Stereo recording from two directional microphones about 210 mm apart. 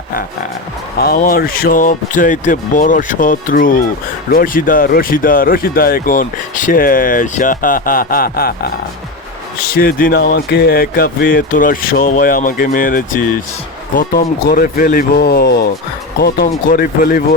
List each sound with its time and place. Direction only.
0.9 s speech: 45° left (ahead or behind)
9.7 s speech: 45° left (ahead or behind)